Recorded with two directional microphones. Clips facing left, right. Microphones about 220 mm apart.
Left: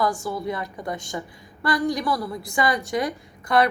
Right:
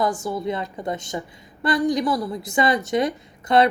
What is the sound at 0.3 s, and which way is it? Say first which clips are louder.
A woman's voice: right 2 dB; 20° right (ahead or behind).